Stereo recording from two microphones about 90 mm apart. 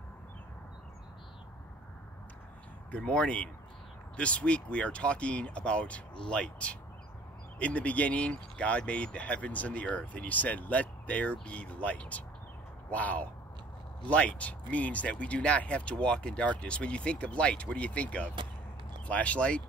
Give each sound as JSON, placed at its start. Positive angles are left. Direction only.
{"t": 2.9, "sound": "speech", "side_deg": 15}